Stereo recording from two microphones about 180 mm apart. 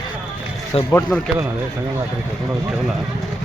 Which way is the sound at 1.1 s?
10° left (ahead or behind).